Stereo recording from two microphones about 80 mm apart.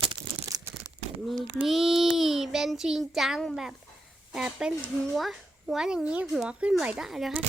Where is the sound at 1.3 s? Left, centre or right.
Centre.